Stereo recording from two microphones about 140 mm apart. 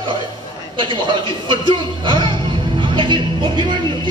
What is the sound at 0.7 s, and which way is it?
A man's voice, 35° right (ahead or behind).